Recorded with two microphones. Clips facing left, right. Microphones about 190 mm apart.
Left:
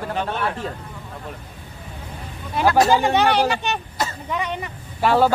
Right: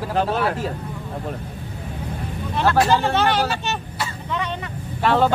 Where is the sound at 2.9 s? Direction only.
15° left (ahead or behind).